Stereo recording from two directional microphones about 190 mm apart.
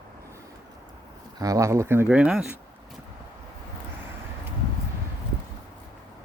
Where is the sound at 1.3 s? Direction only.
20° right (ahead or behind).